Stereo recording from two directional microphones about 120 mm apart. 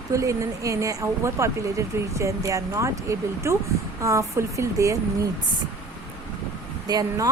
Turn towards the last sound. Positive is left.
turn(degrees=-35)  # may be behind; listen again after turning